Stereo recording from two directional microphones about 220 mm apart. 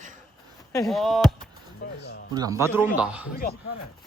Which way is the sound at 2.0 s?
50° left (ahead or behind).